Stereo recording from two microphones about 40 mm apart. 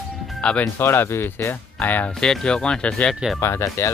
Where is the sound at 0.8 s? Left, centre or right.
Left.